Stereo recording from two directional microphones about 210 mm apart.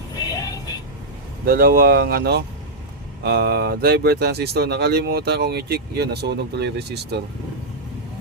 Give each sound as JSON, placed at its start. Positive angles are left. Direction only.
{"t": 0.3, "sound": "vehicle", "side_deg": 15}
{"t": 1.5, "sound": "speech", "side_deg": -45}